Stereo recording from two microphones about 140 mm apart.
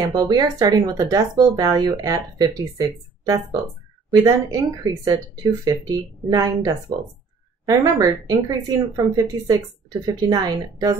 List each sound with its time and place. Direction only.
0.0 s speech: 30° right (ahead or behind)
4.5 s speech: 25° right (ahead or behind)